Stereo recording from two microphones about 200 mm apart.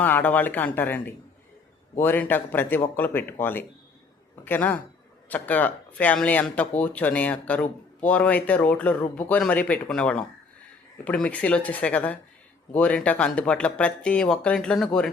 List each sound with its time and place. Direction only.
0.0 s speech: 10° left (ahead or behind)